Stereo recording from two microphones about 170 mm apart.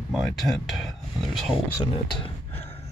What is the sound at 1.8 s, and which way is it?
Speech, 30° left (ahead or behind).